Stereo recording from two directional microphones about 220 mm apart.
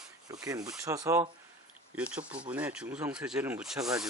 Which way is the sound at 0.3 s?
15° right (ahead or behind).